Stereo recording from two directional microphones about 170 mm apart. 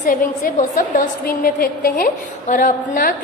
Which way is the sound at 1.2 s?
60° left (ahead or behind).